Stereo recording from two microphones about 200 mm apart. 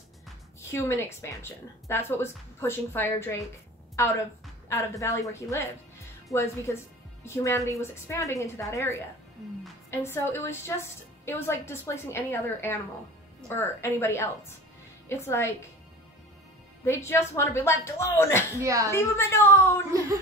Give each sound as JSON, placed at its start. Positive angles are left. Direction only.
{"t": 0.6, "sound": "a woman's voice", "side_deg": 15}
{"t": 16.8, "sound": "a woman's voice", "side_deg": 15}
{"t": 18.6, "sound": "speech", "side_deg": -15}
{"t": 18.9, "sound": "a woman's voice", "side_deg": 10}